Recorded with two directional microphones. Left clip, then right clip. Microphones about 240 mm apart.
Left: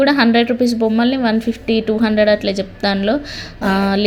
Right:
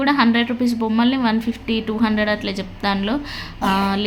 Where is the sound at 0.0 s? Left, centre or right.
Centre.